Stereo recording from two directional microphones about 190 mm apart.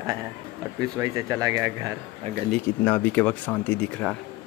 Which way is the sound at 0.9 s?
15° right (ahead or behind).